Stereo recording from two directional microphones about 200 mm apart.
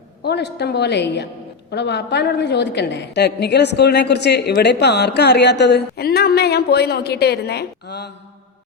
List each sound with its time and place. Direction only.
0.2 s a woman's voice: 55° left (ahead or behind)